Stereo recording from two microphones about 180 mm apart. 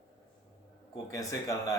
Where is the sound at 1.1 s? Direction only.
20° left (ahead or behind).